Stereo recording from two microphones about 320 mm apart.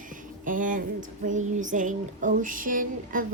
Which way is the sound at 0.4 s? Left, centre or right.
Right.